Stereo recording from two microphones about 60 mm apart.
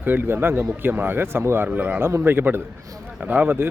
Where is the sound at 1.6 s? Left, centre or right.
Right.